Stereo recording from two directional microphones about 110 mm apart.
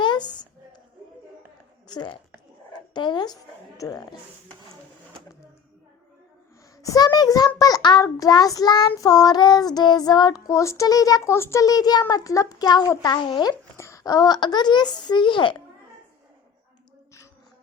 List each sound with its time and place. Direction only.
0.0 s a sound: 45° left (ahead or behind)
1.9 s a woman's voice: 40° left (ahead or behind)
6.8 s a child's voice: 35° left (ahead or behind)
11.6 s a child's voice: 35° left (ahead or behind)